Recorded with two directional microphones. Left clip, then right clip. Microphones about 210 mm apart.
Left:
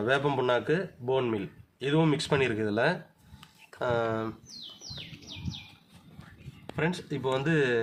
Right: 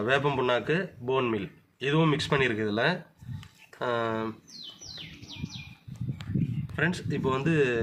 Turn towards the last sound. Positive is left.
turn(degrees=5)  # may be behind; listen again after turning